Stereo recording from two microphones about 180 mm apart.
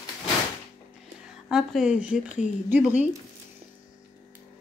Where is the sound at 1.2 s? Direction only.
5° right (ahead or behind).